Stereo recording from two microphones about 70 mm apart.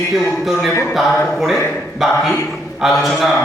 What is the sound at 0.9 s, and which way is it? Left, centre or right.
A man's voice, centre.